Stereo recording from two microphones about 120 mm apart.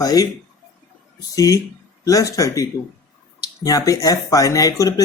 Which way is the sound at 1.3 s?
30° left (ahead or behind).